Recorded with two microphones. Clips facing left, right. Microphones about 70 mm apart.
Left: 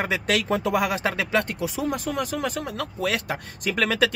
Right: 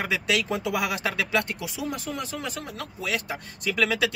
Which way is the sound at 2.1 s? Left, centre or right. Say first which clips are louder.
Left 6 dB; left.